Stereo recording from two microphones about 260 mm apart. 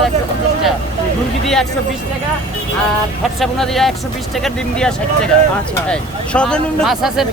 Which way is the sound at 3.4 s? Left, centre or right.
Centre.